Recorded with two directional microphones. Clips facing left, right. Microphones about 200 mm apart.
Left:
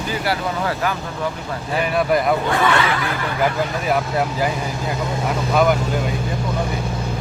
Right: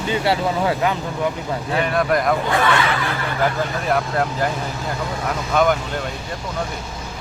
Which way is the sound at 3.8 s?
5° left (ahead or behind).